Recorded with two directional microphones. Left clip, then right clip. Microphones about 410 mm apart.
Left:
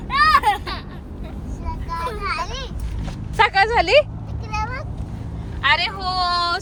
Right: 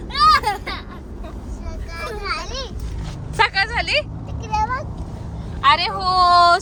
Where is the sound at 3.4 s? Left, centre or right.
Centre.